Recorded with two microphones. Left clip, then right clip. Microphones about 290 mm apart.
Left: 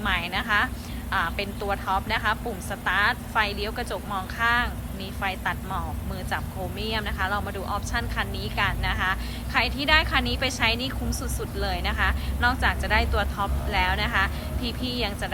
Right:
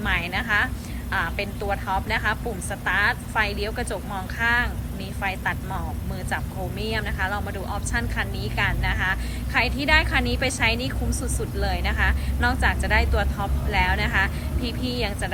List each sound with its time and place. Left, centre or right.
0.0 s a woman's voice: centre
6.8 s speech: centre